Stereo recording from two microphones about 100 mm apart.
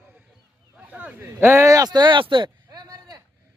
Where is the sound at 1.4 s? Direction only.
30° right (ahead or behind); by 2.5 s 55° right (ahead or behind).